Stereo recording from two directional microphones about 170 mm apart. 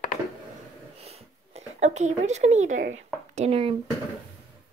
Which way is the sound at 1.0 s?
40° right (ahead or behind).